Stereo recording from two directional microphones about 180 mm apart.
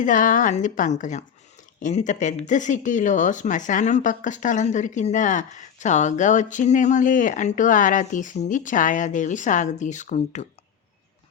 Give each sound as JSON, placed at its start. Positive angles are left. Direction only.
{"t": 0.0, "sound": "speech", "side_deg": 45}